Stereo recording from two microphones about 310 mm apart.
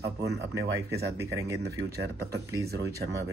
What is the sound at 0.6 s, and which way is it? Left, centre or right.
Speech, centre.